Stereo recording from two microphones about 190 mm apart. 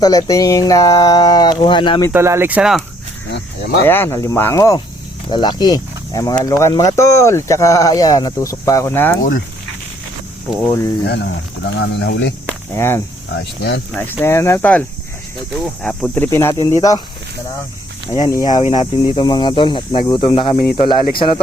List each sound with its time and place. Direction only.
0.0 s speech: 20° left (ahead or behind)
2.1 s speech: 15° right (ahead or behind)
3.3 s speech: 65° left (ahead or behind)
3.8 s speech: 10° left (ahead or behind)
11.0 s speech: 65° left (ahead or behind)
12.7 s speech: 10° left (ahead or behind)
13.3 s speech: 65° left (ahead or behind)
13.9 s speech: 10° left (ahead or behind)
18.2 s speech: 20° left (ahead or behind)
18.6 s speech: 30° left (ahead or behind)